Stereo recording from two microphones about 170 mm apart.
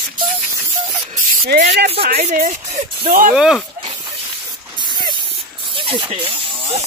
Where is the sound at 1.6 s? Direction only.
85° right.